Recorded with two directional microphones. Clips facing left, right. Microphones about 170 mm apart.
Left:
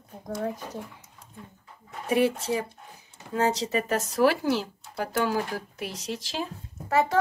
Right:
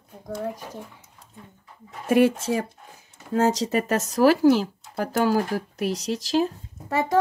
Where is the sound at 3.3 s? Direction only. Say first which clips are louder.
Right 4 dB; 45° right (ahead or behind).